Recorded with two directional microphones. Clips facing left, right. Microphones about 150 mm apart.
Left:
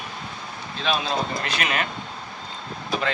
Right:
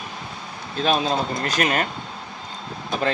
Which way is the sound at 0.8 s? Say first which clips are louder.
Right 4 dB; 45° right (ahead or behind).